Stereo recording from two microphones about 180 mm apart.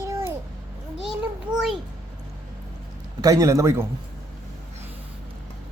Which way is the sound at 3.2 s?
20° right (ahead or behind).